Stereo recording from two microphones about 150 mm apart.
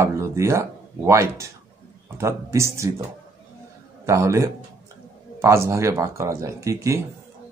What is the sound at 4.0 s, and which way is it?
A man's voice, 20° right (ahead or behind).